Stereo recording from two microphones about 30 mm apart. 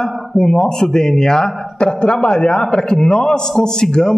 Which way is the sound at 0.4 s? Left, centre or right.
Centre.